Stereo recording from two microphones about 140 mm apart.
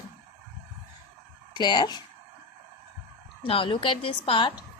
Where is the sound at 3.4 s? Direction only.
40° left (ahead or behind).